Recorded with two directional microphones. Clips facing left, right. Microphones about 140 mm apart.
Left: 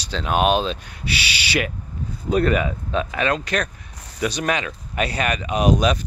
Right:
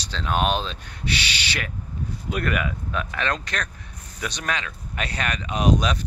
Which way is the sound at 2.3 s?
30° left (ahead or behind).